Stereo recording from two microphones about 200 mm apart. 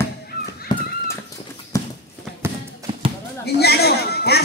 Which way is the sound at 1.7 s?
15° left (ahead or behind).